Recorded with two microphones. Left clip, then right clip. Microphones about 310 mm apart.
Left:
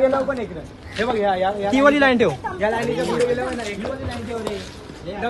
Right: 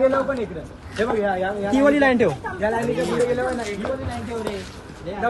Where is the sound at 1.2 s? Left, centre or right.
Left.